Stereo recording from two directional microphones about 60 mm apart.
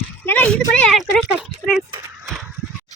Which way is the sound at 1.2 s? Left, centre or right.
Centre.